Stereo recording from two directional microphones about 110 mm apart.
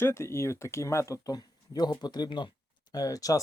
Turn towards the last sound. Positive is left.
turn(degrees=30)  # may be behind; listen again after turning